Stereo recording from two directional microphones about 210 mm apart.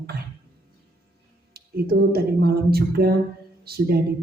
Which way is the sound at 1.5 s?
50° right (ahead or behind).